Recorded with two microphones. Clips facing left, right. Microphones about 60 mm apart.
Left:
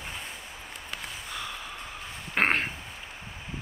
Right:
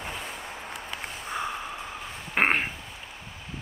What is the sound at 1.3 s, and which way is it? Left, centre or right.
Snort, right.